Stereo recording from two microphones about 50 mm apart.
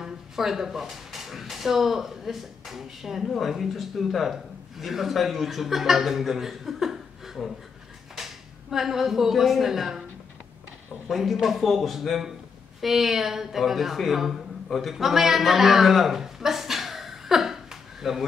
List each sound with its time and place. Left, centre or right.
0.0 s speech: centre
11.1 s speech: centre
14.7 s a sound: centre